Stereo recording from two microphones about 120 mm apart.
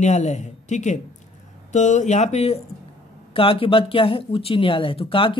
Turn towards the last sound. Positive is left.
turn(degrees=50)  # may be behind; listen again after turning